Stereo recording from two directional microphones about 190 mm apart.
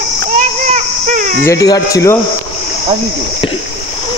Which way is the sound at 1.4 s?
15° left (ahead or behind).